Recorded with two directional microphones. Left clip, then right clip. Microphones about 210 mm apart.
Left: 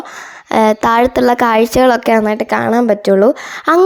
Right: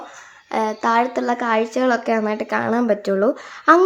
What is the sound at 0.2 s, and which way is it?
A woman's voice, 40° left (ahead or behind).